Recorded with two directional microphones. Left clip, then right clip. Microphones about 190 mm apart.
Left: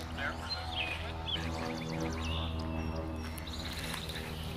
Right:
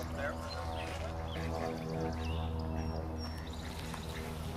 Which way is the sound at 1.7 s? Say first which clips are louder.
Left 1 dB; 55° right (ahead or behind).